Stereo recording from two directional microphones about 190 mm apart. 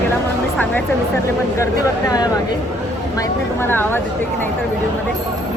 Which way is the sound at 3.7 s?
10° left (ahead or behind).